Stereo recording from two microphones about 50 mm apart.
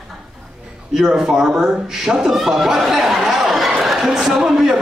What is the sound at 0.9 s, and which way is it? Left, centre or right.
Speech, centre.